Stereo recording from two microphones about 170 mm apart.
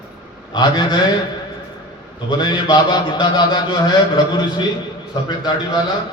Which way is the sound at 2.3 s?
25° left (ahead or behind).